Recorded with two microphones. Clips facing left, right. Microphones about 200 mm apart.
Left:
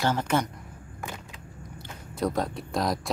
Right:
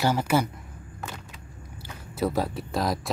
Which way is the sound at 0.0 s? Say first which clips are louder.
Right 2 dB; 10° right (ahead or behind).